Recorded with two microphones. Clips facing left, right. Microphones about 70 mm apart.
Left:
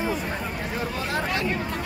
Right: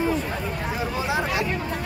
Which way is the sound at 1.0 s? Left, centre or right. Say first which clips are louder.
Right 3 dB; centre.